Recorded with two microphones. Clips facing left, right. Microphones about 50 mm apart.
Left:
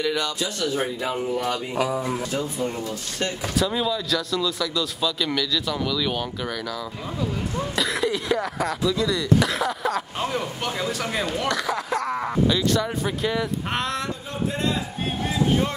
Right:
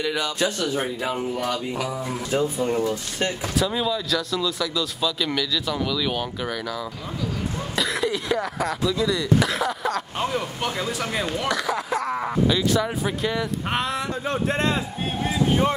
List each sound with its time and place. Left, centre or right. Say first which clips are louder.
0.0 s speech: right 1 dB; centre
1.5 s music: left 2 dB; centre
2.3 s speech: right 4 dB; centre
3.4 s speech: left 2 dB; centre
14.3 s speech: right 2 dB; right
15.2 s vehicle: right 1 dB; centre